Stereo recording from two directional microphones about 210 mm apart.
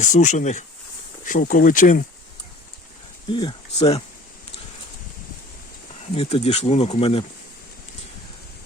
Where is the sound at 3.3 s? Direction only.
25° left (ahead or behind).